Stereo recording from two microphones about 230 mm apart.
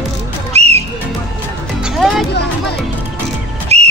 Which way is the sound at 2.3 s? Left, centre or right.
Left.